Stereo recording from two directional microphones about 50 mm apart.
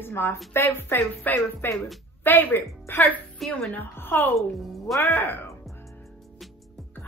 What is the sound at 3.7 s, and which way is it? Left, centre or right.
Speech, left.